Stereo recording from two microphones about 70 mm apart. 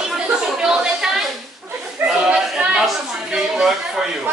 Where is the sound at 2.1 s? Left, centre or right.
Centre.